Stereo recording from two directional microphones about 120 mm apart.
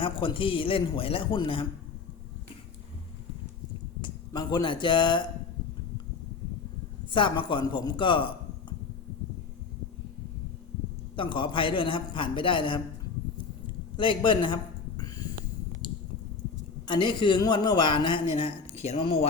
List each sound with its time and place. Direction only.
0.0 s a man's voice: 45° left (ahead or behind)
4.3 s a man's voice: 35° left (ahead or behind)
7.1 s a man's voice: 45° left (ahead or behind)
11.2 s a man's voice: 45° left (ahead or behind)
13.9 s a sound: 45° left (ahead or behind)
16.8 s a man's voice: 40° left (ahead or behind)
18.8 s speech: 65° left (ahead or behind)
19.0 s a man's voice: 55° left (ahead or behind)